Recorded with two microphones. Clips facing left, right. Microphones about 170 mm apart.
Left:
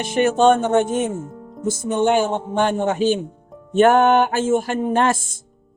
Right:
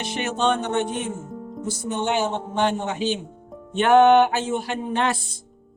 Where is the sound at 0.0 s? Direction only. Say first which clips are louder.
Left 8 dB; 50° left (ahead or behind).